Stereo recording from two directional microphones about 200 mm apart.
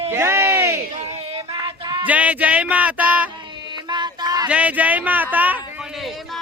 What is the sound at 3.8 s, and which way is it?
Music, 20° right (ahead or behind).